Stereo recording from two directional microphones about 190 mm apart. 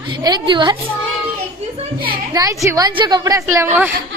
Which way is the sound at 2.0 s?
25° right (ahead or behind).